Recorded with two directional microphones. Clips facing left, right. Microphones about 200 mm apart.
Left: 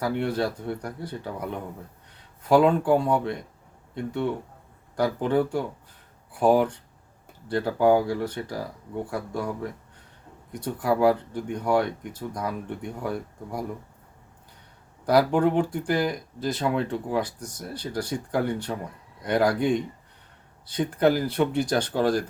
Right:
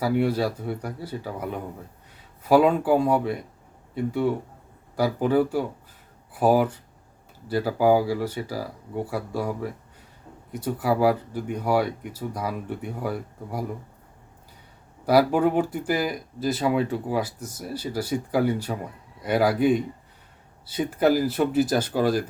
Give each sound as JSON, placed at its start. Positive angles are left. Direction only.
{"t": 0.0, "sound": "speech", "side_deg": -10}
{"t": 15.0, "sound": "speech", "side_deg": -5}